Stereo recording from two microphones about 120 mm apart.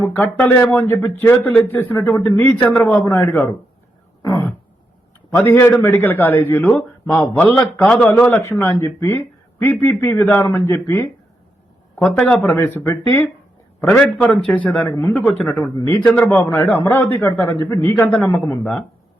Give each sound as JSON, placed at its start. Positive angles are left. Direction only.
{"t": 0.0, "sound": "a man's voice", "side_deg": 15}
{"t": 4.2, "sound": "throat clearing", "side_deg": 20}
{"t": 5.4, "sound": "a man's voice", "side_deg": 20}
{"t": 8.1, "sound": "a man's voice", "side_deg": 20}
{"t": 12.0, "sound": "a man's voice", "side_deg": 5}
{"t": 15.6, "sound": "a man's voice", "side_deg": 25}